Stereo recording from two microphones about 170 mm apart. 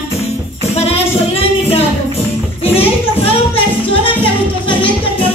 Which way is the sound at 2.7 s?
35° left (ahead or behind).